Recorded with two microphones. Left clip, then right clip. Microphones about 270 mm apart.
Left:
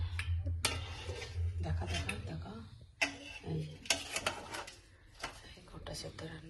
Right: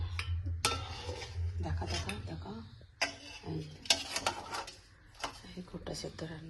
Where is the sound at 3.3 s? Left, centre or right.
Right.